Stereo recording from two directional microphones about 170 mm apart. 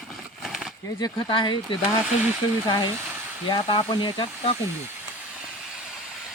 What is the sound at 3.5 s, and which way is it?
Speech, 30° left (ahead or behind).